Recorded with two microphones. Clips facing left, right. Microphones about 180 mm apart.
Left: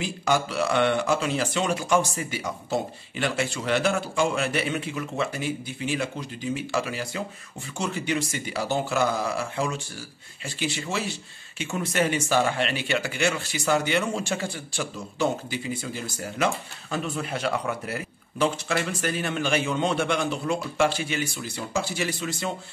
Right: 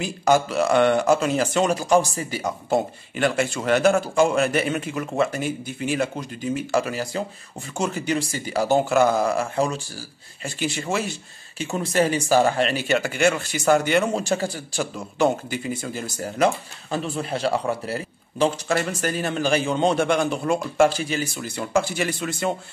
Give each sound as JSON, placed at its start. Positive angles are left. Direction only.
{"t": 0.0, "sound": "speech", "side_deg": -45}
{"t": 2.7, "sound": "speech", "side_deg": -50}
{"t": 11.5, "sound": "speech", "side_deg": -35}
{"t": 18.8, "sound": "speech", "side_deg": -40}
{"t": 21.4, "sound": "speech", "side_deg": -55}